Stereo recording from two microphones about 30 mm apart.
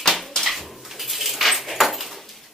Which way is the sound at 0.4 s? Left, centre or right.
Centre.